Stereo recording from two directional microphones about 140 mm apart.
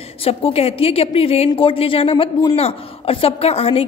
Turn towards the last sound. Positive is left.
turn(degrees=45)  # may be behind; listen again after turning